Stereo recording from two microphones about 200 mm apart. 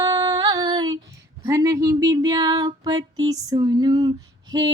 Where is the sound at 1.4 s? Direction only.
15° right (ahead or behind).